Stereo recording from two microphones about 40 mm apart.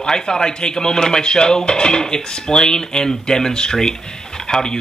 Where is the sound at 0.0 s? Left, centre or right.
Centre.